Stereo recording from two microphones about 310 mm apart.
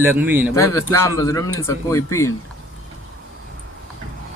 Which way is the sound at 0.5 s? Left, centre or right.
Centre.